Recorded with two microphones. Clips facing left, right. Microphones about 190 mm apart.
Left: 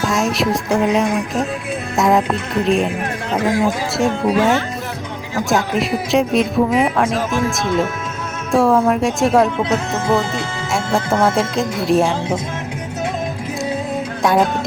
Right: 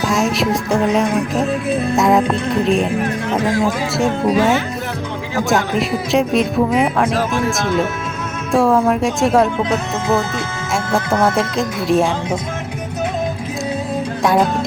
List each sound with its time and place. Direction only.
0.0 s speech: centre (ahead or behind)
8.5 s speech: centre (ahead or behind)